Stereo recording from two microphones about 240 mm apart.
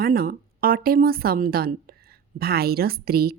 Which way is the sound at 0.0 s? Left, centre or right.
Right.